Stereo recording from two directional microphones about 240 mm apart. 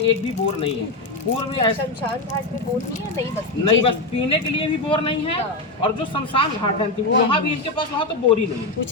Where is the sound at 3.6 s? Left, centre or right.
Left.